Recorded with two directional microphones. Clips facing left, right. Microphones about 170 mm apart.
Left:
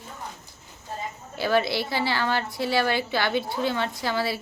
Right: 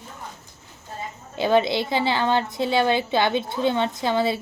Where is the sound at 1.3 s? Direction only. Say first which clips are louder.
Right 4 dB; 20° right (ahead or behind).